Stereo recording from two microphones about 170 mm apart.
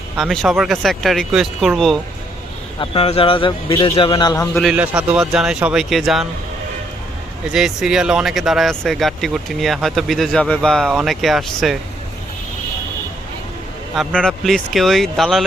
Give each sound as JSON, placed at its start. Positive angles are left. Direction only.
{"t": 0.2, "sound": "speech", "side_deg": 0}
{"t": 2.8, "sound": "a man's voice", "side_deg": 35}
{"t": 4.6, "sound": "speech", "side_deg": -5}
{"t": 7.5, "sound": "speech", "side_deg": -5}
{"t": 13.9, "sound": "speech", "side_deg": 0}